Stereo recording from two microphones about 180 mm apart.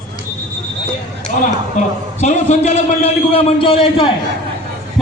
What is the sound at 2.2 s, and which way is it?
A man's voice, 40° left (ahead or behind).